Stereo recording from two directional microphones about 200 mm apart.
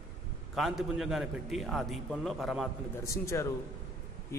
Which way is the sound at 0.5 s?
Centre (ahead or behind).